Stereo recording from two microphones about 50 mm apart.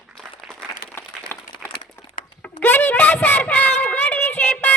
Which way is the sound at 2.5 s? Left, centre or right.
Left.